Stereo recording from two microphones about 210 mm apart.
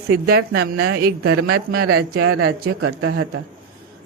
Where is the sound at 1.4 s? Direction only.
90° right.